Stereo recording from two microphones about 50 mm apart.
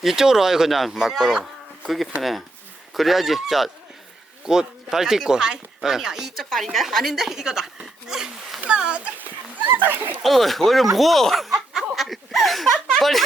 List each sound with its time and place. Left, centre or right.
0.0 s speech: centre
2.9 s speech: centre
8.0 s a sound: centre
8.6 s speech: right
9.7 s speech: right
10.2 s speech: centre